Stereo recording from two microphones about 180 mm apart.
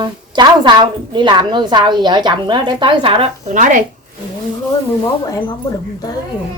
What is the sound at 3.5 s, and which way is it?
Speech, 45° right (ahead or behind).